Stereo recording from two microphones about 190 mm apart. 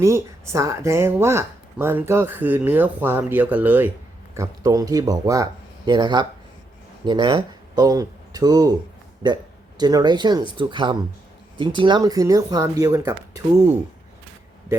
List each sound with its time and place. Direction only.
0.0 s speech: 15° right (ahead or behind)